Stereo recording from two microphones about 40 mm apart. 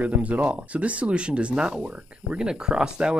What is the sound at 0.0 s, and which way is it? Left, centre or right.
Speech, right.